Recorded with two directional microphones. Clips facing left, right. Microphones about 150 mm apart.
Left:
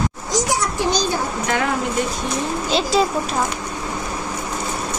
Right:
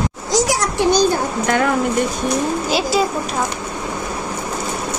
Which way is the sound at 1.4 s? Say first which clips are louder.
Right 5 dB; 50° right (ahead or behind).